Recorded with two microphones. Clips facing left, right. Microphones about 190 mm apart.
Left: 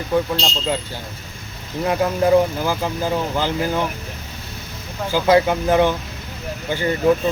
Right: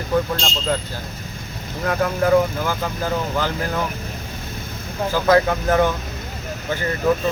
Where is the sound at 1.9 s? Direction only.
20° left (ahead or behind).